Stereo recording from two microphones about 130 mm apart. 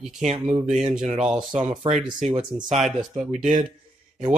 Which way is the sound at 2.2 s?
60° right (ahead or behind).